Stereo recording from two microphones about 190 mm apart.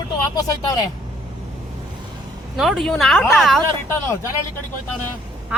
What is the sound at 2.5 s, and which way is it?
Speech, centre (ahead or behind).